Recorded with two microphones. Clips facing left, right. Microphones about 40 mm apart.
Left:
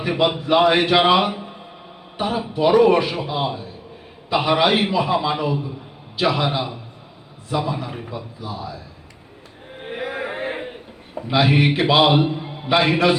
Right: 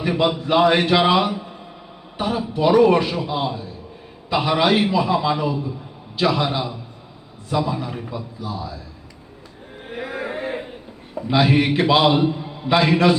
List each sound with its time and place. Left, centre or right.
0.0 s a man's voice: centre
8.1 s speech: centre
9.8 s a sound: left
12.6 s a man's voice: centre